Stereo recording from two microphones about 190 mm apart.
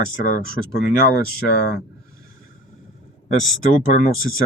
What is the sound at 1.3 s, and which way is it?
Speech, 55° left (ahead or behind).